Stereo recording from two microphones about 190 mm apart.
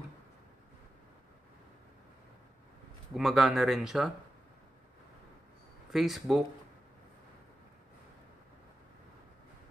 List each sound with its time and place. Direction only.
3.2 s speech: centre (ahead or behind)
5.9 s speech: centre (ahead or behind)